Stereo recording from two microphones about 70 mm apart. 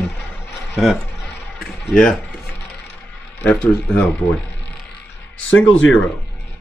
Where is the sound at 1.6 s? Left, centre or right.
Centre.